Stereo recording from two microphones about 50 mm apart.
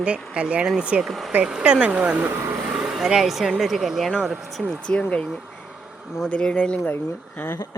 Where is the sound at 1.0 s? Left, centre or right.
Centre.